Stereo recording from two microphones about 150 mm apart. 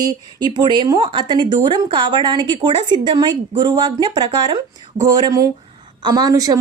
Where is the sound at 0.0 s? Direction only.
30° right (ahead or behind).